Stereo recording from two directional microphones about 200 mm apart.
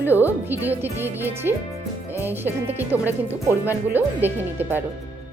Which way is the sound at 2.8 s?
10° right (ahead or behind).